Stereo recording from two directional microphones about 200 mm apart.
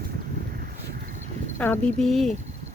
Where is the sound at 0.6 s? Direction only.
45° right (ahead or behind).